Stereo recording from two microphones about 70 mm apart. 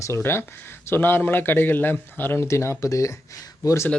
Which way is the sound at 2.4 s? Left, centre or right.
Left.